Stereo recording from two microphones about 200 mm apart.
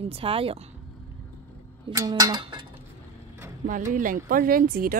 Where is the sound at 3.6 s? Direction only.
40° right (ahead or behind).